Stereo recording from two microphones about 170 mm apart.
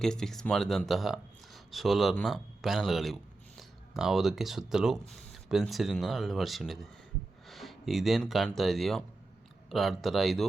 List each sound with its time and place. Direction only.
0.0 s speech: 5° left (ahead or behind)